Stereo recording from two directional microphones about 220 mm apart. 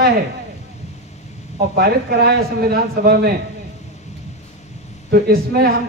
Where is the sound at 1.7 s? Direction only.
45° right (ahead or behind).